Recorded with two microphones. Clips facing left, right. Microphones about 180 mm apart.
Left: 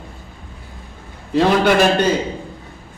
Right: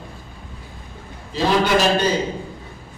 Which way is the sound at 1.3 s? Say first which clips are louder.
Left 4 dB; 60° left (ahead or behind).